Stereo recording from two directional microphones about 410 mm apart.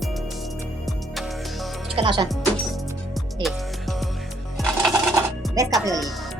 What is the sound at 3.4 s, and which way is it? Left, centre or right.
Music, centre.